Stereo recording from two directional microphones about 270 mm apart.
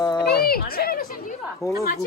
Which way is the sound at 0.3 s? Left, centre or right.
Left.